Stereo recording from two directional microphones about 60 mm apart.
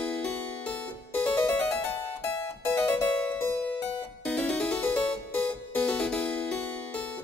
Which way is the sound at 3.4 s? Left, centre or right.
Left.